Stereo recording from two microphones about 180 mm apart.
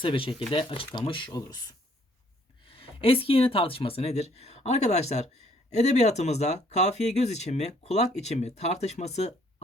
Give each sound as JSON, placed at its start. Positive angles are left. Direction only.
{"t": 0.0, "sound": "speech", "side_deg": 30}
{"t": 2.6, "sound": "speech", "side_deg": 30}